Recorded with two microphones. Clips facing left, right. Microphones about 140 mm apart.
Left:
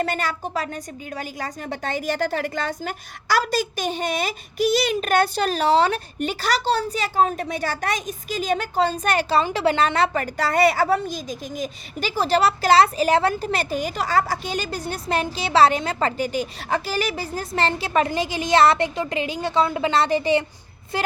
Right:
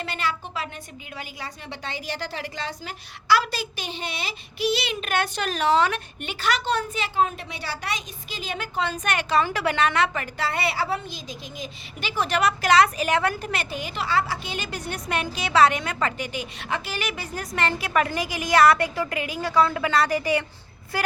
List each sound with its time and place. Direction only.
0.0 s a woman's voice: 45° left (ahead or behind); by 21.1 s 20° left (ahead or behind)